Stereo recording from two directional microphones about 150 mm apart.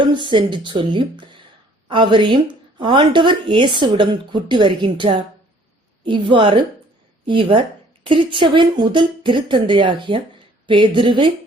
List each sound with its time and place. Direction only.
0.0 s speech: 30° right (ahead or behind)